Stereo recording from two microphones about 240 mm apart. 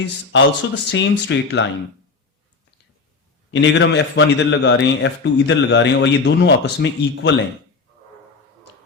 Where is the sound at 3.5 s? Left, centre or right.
Left.